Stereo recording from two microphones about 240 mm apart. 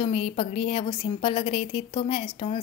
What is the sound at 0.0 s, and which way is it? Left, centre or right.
A woman's voice, left.